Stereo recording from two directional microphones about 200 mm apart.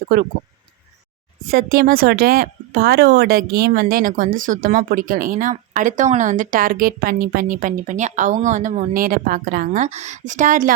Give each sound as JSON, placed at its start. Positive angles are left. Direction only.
{"t": 1.5, "sound": "speech", "side_deg": -45}